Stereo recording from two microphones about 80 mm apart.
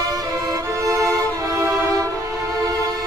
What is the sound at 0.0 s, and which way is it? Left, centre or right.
Music, right.